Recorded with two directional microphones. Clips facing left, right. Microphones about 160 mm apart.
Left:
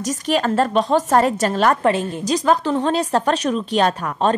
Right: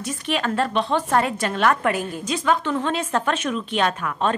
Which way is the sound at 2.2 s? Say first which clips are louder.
Left 5 dB; 35° left (ahead or behind).